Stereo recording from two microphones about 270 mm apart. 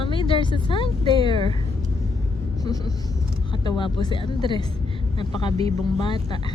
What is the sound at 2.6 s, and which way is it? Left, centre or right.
Speech, centre.